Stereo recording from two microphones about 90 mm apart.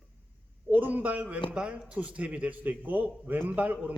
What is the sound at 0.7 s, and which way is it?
A man's voice, 20° right (ahead or behind).